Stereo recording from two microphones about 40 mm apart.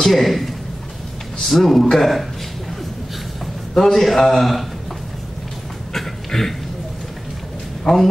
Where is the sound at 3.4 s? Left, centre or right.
Centre.